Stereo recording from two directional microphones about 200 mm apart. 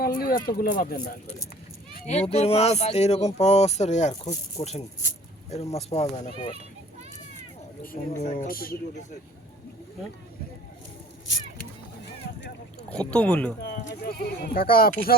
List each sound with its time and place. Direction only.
0.0 s speech: 50° left (ahead or behind)
2.0 s speech: 30° left (ahead or behind)
8.1 s speech: 35° left (ahead or behind)
12.9 s speech: 5° left (ahead or behind)
13.6 s speech: 50° left (ahead or behind)